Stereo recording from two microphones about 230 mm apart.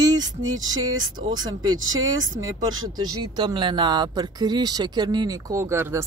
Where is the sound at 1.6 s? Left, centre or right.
Right.